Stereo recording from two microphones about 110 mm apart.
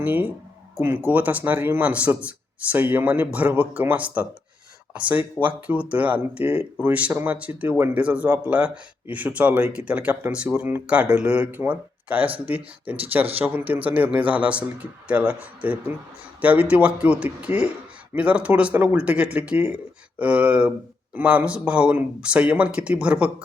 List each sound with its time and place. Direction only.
0.0 s speech: 15° right (ahead or behind)